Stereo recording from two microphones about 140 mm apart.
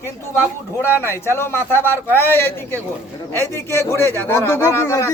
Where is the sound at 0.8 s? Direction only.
15° left (ahead or behind).